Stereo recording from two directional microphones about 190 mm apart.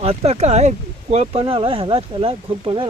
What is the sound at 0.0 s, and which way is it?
Speech, 30° right (ahead or behind).